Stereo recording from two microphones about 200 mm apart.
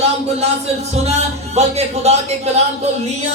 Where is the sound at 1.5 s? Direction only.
30° right (ahead or behind).